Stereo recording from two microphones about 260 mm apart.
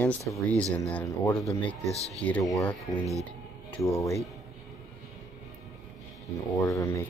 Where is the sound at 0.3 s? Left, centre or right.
Centre.